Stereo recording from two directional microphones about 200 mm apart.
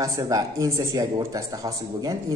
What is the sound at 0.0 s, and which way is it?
Speech, 15° right (ahead or behind).